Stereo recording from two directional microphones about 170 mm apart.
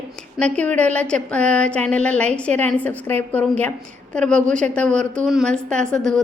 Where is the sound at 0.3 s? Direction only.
5° left (ahead or behind).